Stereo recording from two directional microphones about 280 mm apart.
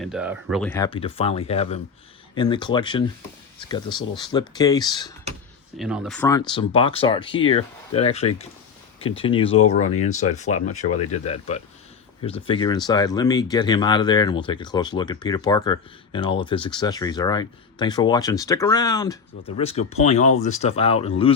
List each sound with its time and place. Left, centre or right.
0.0 s speech: centre
0.7 s speech: centre
0.9 s speech: centre
5.7 s speech: centre
6.2 s speech: centre